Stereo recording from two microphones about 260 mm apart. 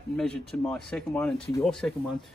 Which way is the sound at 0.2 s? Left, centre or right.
Centre.